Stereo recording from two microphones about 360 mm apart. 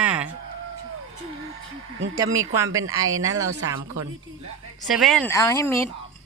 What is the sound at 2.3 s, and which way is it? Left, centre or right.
Speech, centre.